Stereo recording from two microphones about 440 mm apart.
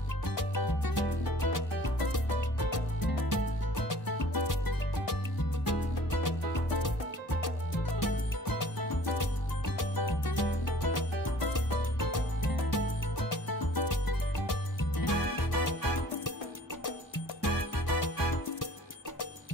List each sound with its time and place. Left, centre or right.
0.4 s music: left
8.0 s music: left
9.8 s music: left
13.3 s music: left